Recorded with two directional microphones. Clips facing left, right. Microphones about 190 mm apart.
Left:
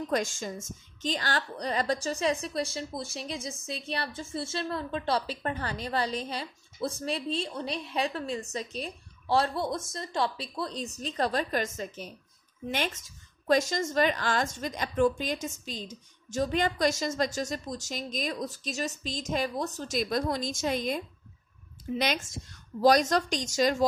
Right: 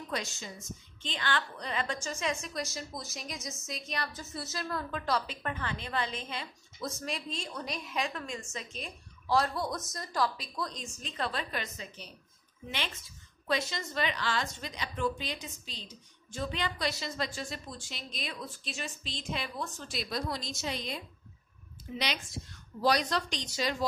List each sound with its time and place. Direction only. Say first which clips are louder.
0.1 s a woman's voice: left 7 dB; 50° left (ahead or behind)